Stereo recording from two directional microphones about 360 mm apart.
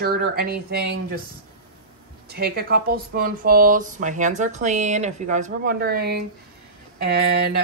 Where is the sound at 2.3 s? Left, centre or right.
Right.